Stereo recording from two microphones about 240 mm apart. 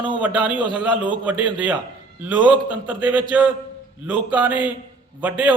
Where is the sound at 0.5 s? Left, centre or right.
Centre.